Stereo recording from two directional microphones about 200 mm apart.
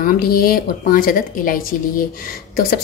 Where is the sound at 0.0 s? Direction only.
50° left (ahead or behind).